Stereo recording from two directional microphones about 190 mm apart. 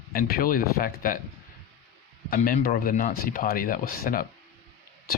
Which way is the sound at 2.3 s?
50° left (ahead or behind).